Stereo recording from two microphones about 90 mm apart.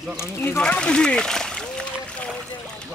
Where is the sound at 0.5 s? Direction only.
10° left (ahead or behind).